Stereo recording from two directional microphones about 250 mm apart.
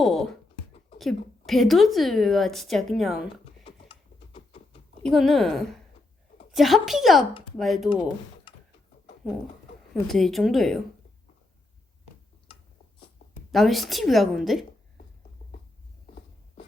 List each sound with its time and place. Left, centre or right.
0.0 s a sound: centre
0.9 s a woman's voice: centre
3.8 s a sound: left
5.0 s a woman's voice: centre
9.2 s a woman's voice: centre
13.5 s a woman's voice: centre